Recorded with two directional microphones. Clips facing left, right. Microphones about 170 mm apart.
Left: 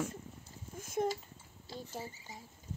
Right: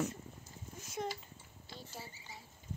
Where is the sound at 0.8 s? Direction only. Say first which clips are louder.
Left 7 dB; 50° left (ahead or behind).